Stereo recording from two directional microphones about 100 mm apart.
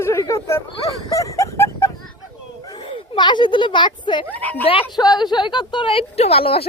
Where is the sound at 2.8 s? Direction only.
55° left (ahead or behind).